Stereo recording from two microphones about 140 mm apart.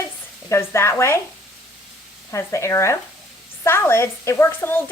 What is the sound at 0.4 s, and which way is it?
Speech, 20° left (ahead or behind).